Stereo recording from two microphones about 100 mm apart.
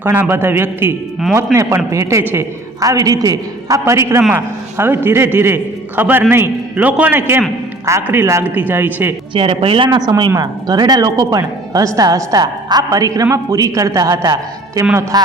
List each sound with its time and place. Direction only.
0.0 s a man's voice: 20° right (ahead or behind)
9.3 s speech: 70° right (ahead or behind)
9.9 s speech: 45° right (ahead or behind)